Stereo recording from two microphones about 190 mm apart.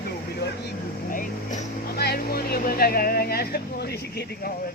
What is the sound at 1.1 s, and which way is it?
Speech, 45° left (ahead or behind).